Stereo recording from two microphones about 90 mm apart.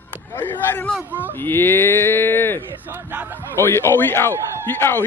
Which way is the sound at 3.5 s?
25° left (ahead or behind).